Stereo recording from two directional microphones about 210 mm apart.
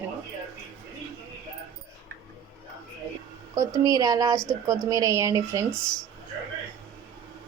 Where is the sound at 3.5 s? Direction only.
15° right (ahead or behind).